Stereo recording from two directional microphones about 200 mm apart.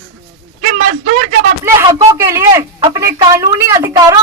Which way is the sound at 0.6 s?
40° right (ahead or behind).